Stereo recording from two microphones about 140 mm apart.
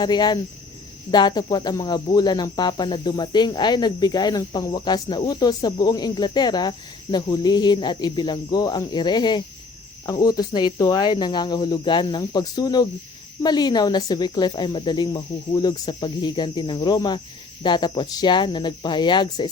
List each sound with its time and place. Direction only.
0.0 s speech: 30° left (ahead or behind)